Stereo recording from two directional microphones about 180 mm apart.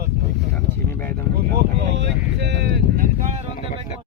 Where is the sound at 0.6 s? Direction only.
10° left (ahead or behind).